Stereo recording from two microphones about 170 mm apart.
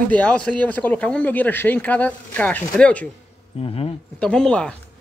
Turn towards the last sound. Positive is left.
turn(degrees=5)  # may be behind; listen again after turning